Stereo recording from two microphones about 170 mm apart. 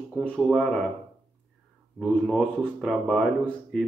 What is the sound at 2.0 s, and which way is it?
Speech, centre (ahead or behind).